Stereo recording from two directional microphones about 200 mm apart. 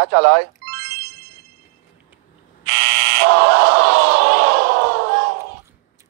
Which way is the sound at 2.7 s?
55° right (ahead or behind).